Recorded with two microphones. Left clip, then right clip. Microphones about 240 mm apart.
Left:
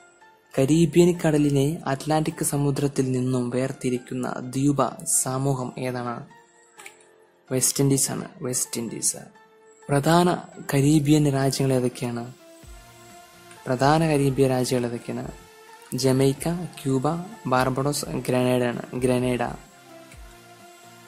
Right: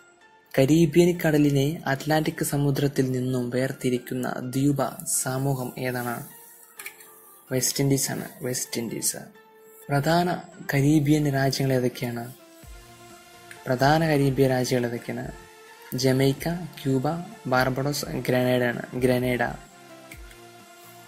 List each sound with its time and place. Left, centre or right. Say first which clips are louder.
0.8 s speech: left 1 dB; centre
7.4 s speech: left 2 dB; centre
9.8 s speech: left 3 dB; centre
13.7 s speech: left 1 dB; centre